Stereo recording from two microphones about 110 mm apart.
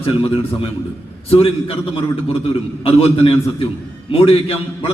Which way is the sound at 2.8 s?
60° left (ahead or behind).